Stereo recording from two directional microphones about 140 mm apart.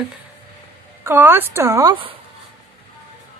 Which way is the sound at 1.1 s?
15° right (ahead or behind).